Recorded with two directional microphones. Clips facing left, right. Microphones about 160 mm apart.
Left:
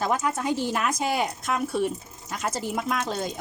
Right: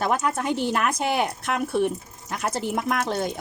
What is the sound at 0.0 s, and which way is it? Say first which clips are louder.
Speech: right 2 dB; 65° right (ahead or behind).